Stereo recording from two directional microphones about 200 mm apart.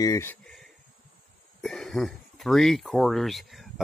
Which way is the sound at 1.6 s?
5° left (ahead or behind).